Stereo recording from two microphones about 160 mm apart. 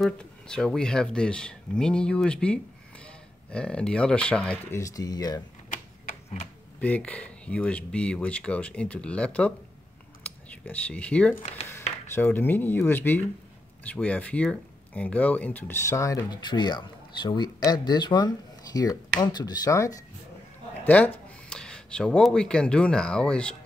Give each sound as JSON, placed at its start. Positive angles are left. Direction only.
{"t": 0.0, "sound": "speech", "side_deg": 5}
{"t": 4.7, "sound": "speech", "side_deg": 20}
{"t": 5.7, "sound": "tick-tock", "side_deg": 55}
{"t": 6.8, "sound": "speech", "side_deg": 10}
{"t": 20.8, "sound": "speech", "side_deg": 10}